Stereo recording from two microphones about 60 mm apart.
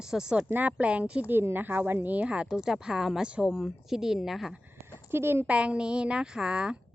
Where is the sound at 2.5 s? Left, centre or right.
Centre.